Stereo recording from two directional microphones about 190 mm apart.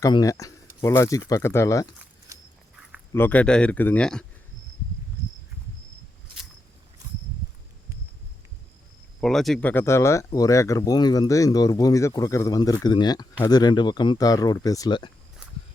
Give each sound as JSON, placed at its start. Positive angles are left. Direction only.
{"t": 0.0, "sound": "speech", "side_deg": 20}
{"t": 3.1, "sound": "speech", "side_deg": 10}
{"t": 9.2, "sound": "speech", "side_deg": 0}